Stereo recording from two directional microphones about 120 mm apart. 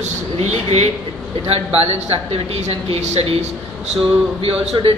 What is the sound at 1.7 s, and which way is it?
A man's voice, 55° right (ahead or behind).